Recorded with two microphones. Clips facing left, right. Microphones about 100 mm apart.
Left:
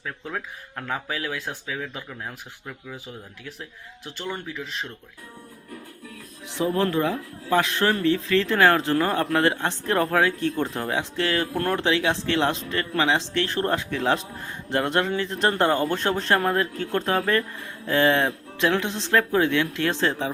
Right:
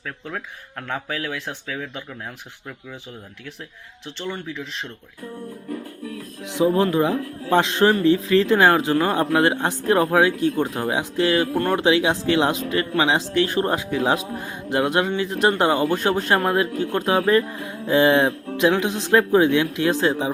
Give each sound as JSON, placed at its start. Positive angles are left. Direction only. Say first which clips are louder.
{"t": 0.9, "sound": "speech", "louder": "right 2 dB", "side_deg": 5}
{"t": 4.3, "sound": "speech", "louder": "right 2 dB", "side_deg": 5}
{"t": 6.4, "sound": "music", "louder": "right 5 dB", "side_deg": -15}
{"t": 6.9, "sound": "a man's voice", "louder": "right 4 dB", "side_deg": -15}
{"t": 11.5, "sound": "speech", "louder": "right 4 dB", "side_deg": 0}
{"t": 11.8, "sound": "speech", "louder": "right 4 dB", "side_deg": -15}